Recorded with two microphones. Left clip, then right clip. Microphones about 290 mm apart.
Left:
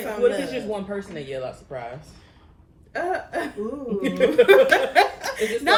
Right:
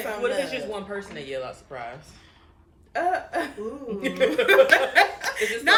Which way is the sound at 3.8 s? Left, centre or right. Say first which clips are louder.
Left 2 dB; centre.